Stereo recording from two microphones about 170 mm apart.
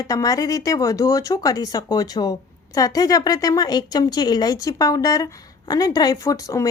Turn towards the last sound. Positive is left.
turn(degrees=20)  # may be behind; listen again after turning